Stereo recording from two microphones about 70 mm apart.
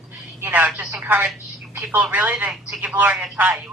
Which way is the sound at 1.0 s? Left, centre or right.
Right.